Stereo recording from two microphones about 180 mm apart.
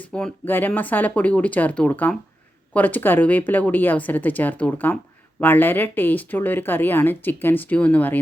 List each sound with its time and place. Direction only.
0.0 s speech: 5° left (ahead or behind)